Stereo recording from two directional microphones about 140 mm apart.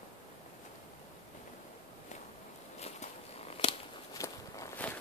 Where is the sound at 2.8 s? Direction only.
50° left (ahead or behind).